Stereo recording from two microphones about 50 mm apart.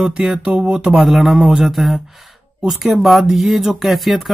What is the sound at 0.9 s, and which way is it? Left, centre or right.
Speech, centre.